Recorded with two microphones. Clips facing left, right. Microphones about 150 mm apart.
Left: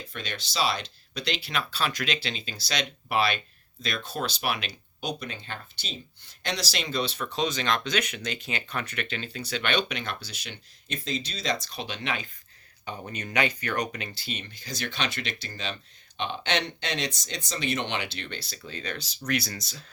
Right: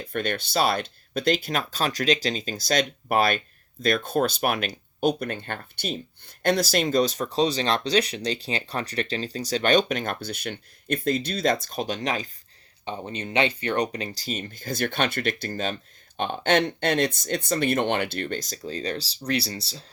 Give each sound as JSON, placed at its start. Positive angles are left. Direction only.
{"t": 0.0, "sound": "speech", "side_deg": -55}
{"t": 12.8, "sound": "speech", "side_deg": -25}